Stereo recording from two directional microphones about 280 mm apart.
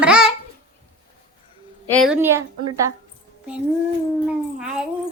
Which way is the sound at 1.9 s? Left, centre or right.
Centre.